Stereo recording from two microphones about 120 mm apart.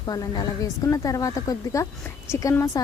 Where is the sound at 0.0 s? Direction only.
30° left (ahead or behind).